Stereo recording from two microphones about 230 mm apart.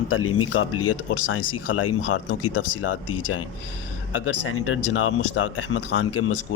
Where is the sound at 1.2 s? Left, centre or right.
Left.